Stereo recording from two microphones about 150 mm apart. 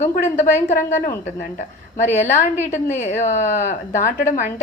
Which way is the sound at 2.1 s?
50° left (ahead or behind).